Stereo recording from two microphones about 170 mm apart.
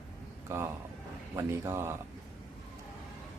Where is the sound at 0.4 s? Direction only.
15° right (ahead or behind).